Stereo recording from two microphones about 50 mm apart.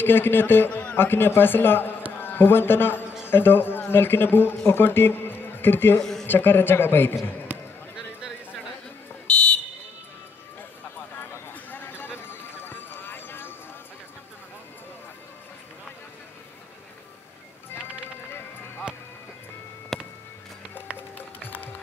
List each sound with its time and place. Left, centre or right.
0.0 s a man's voice: left
0.7 s a sound: left
0.9 s a man's voice: left
5.9 s speech: centre
6.2 s a man's voice: left
9.3 s fire alarm: left
11.1 s clip-clop: left
19.9 s music: centre
21.4 s music: left